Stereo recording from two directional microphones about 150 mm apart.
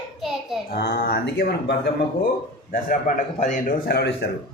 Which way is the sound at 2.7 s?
70° left (ahead or behind).